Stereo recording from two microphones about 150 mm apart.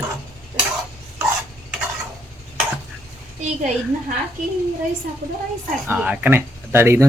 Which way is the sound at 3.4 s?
50° right (ahead or behind).